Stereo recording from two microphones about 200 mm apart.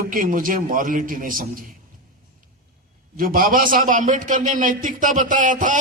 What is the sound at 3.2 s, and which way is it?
A man's voice, 45° right (ahead or behind).